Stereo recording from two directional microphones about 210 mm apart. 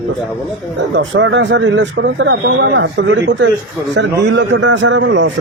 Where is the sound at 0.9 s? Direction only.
60° right (ahead or behind).